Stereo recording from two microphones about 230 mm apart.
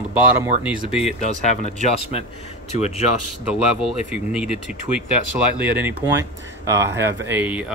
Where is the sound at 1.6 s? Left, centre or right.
Left.